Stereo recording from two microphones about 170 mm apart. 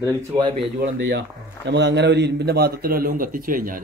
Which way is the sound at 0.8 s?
80° right.